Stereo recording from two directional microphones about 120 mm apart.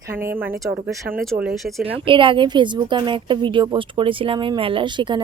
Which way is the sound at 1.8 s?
45° right (ahead or behind).